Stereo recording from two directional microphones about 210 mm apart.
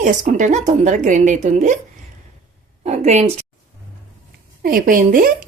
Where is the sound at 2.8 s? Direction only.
30° right (ahead or behind).